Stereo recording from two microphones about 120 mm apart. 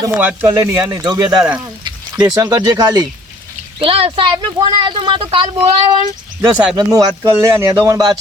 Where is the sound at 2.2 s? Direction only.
35° right (ahead or behind).